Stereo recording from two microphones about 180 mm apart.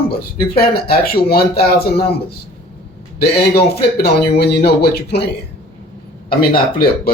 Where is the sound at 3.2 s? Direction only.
60° left (ahead or behind).